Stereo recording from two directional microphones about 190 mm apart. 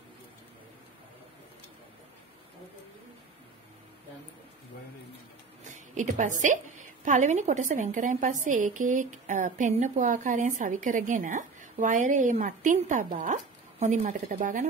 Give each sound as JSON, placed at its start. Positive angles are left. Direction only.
{"t": 5.7, "sound": "a woman's voice", "side_deg": -40}